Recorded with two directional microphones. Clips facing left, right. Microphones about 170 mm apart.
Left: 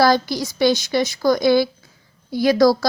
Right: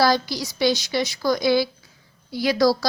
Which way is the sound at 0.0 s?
50° left (ahead or behind).